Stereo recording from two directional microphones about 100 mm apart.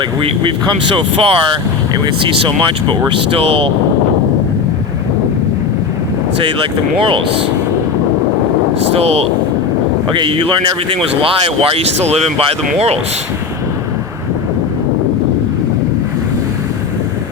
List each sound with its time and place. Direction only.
0.2 s speech: 55° right (ahead or behind)
3.1 s speech: 70° right (ahead or behind)
6.4 s speech: 60° right (ahead or behind)
8.9 s speech: 90° right
10.1 s speech: 60° right (ahead or behind); by 12.5 s 80° right